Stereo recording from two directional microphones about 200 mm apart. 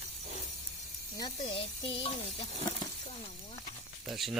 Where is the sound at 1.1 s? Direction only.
25° left (ahead or behind).